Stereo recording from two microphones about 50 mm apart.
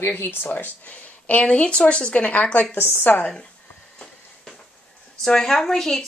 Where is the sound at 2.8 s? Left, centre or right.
Left.